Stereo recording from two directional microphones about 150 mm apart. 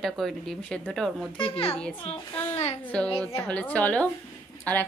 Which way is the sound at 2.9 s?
5° left (ahead or behind).